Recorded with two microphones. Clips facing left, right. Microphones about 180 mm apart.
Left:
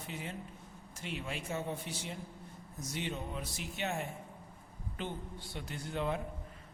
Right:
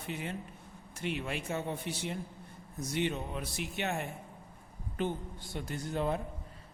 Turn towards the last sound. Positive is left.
turn(degrees=-40)  # may be behind; listen again after turning